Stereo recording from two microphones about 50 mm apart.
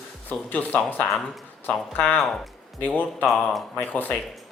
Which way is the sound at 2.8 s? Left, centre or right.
Left.